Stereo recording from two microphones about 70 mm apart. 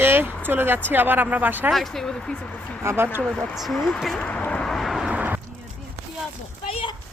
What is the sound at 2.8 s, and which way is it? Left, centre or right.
Speech, right.